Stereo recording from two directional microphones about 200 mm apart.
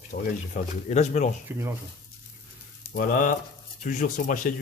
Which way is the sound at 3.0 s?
45° left (ahead or behind).